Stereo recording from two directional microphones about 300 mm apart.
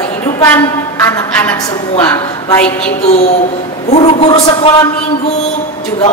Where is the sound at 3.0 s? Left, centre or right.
Left.